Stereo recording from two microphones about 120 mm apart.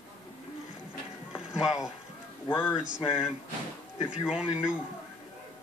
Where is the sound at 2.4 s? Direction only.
15° left (ahead or behind).